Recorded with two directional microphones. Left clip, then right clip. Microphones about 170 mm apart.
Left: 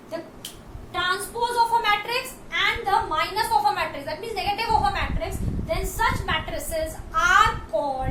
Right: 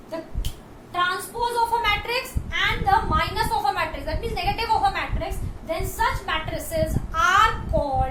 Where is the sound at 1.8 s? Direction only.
20° right (ahead or behind).